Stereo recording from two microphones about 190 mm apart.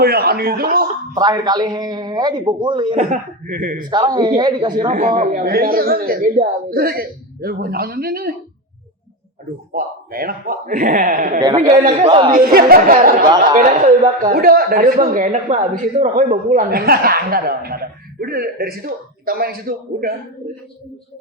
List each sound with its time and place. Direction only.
0.0 s speech: 55° right (ahead or behind)
1.1 s a man's voice: 20° right (ahead or behind)
3.1 s speech: 45° right (ahead or behind)
3.8 s a man's voice: 20° right (ahead or behind)
4.9 s speech: 45° right (ahead or behind)
9.7 s speech: 50° right (ahead or behind)
11.8 s a man's voice: 30° right (ahead or behind)
12.3 s speech: 50° right (ahead or behind)
13.2 s a man's voice: 20° right (ahead or behind)
13.6 s speech: 45° right (ahead or behind)